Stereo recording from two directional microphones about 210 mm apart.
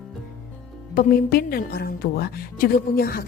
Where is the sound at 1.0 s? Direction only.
45° left (ahead or behind).